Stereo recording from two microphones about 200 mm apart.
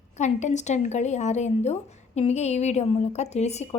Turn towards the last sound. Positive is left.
turn(degrees=35)  # may be behind; listen again after turning